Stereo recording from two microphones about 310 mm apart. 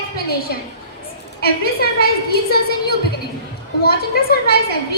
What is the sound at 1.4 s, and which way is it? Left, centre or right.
A woman's voice, left.